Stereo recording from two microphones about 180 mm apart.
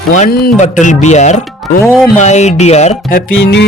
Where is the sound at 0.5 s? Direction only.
40° left (ahead or behind).